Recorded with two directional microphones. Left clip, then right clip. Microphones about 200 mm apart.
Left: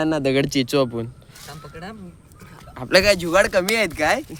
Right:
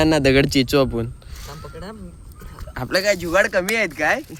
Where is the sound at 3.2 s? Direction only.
10° left (ahead or behind).